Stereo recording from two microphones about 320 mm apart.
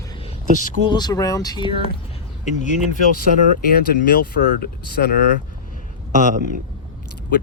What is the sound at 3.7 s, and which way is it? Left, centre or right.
Speech, left.